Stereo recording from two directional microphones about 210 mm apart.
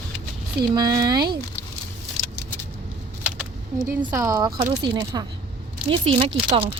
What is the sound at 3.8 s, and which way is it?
Speech, 15° right (ahead or behind).